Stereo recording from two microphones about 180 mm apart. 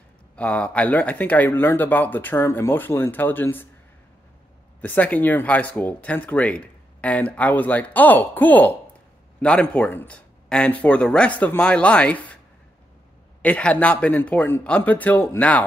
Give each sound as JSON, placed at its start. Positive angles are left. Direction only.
{"t": 0.4, "sound": "speech", "side_deg": 5}
{"t": 4.8, "sound": "speech", "side_deg": 10}
{"t": 13.4, "sound": "speech", "side_deg": 5}